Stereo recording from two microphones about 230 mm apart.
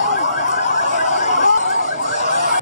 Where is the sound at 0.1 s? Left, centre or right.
Left.